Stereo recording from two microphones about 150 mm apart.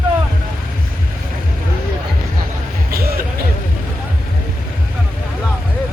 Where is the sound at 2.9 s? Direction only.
90° right.